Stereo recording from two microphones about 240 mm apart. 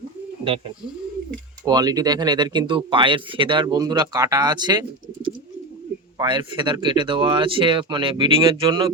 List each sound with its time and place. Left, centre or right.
1.6 s speech: centre
6.1 s speech: centre